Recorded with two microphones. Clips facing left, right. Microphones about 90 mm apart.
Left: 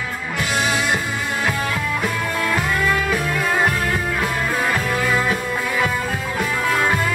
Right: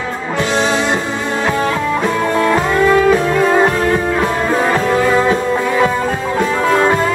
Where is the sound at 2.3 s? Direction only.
30° right (ahead or behind).